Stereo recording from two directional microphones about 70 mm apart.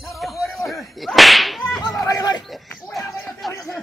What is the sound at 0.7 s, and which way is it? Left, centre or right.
Whip, centre.